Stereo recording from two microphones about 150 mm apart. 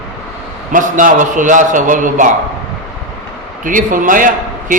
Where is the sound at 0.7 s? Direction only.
60° right (ahead or behind).